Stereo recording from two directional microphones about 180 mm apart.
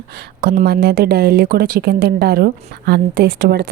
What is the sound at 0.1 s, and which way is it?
Speech, 60° right (ahead or behind).